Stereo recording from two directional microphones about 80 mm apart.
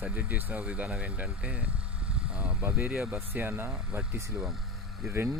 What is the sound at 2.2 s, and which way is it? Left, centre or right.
Vehicle, centre.